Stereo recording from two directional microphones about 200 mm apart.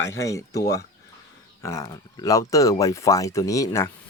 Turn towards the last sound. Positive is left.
turn(degrees=15)  # may be behind; listen again after turning